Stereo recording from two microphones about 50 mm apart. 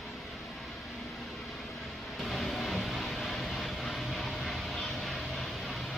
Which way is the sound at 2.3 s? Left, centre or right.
Centre.